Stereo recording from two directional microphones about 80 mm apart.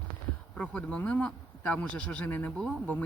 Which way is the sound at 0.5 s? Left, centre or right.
Centre.